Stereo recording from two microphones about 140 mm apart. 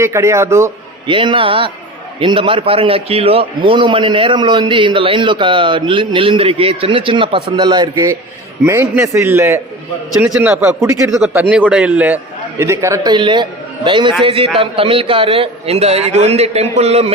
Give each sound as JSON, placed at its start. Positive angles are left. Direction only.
{"t": 0.0, "sound": "a man's voice", "side_deg": -20}
{"t": 1.0, "sound": "a man's voice", "side_deg": -35}
{"t": 8.6, "sound": "a man's voice", "side_deg": -20}
{"t": 10.8, "sound": "a man's voice", "side_deg": -20}
{"t": 11.1, "sound": "a man's voice", "side_deg": -10}